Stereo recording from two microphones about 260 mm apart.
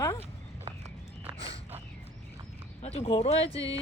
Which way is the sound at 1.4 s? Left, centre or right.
Left.